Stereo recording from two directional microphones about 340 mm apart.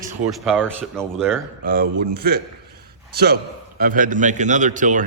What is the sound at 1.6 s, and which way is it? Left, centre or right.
A man's voice, right.